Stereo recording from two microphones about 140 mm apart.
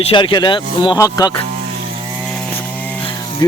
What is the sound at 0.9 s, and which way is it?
Speech, 25° left (ahead or behind).